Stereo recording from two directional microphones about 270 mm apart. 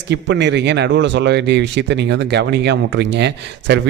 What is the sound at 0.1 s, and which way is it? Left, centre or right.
Speech, right.